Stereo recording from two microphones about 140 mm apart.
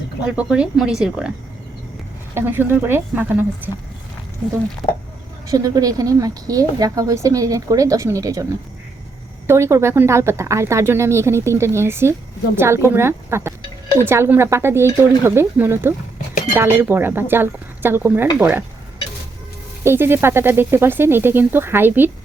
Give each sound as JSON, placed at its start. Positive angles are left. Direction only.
{"t": 0.3, "sound": "speech", "side_deg": -5}
{"t": 2.3, "sound": "speech", "side_deg": -15}
{"t": 5.5, "sound": "a woman's voice", "side_deg": -25}
{"t": 9.5, "sound": "a woman's voice", "side_deg": -20}
{"t": 19.8, "sound": "speech", "side_deg": -15}